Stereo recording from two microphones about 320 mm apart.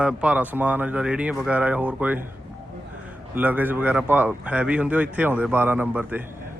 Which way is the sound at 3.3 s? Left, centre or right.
Centre.